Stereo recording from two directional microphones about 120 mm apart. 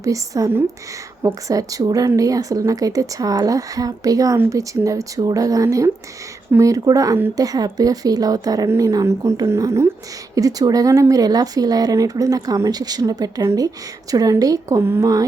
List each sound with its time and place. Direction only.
0.0 s speech: 30° right (ahead or behind)